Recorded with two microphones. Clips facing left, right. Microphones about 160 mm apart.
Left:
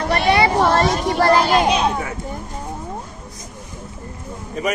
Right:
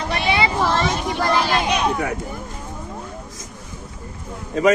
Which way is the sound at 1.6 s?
30° left (ahead or behind).